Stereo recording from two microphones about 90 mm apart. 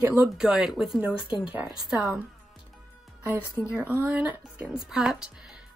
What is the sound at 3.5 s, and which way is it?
Speech, 15° right (ahead or behind).